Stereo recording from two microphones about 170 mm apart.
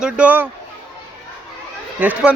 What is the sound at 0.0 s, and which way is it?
Speech, 10° right (ahead or behind).